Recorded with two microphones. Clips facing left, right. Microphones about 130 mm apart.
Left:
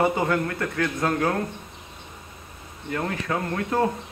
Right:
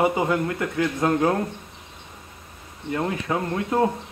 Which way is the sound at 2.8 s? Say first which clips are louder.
Right 2 dB; 20° right (ahead or behind).